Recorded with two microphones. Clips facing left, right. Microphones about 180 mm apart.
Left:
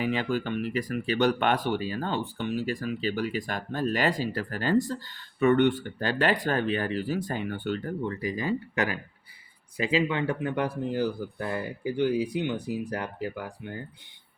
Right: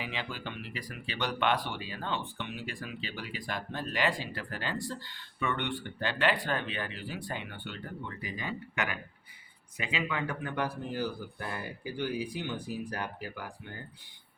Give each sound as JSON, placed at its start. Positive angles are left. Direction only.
{"t": 0.0, "sound": "speech", "side_deg": 45}